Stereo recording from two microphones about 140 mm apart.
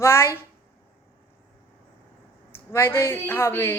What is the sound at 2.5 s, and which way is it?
Speech, 15° left (ahead or behind).